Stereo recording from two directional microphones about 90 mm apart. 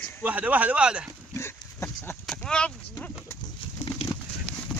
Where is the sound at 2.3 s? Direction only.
10° left (ahead or behind).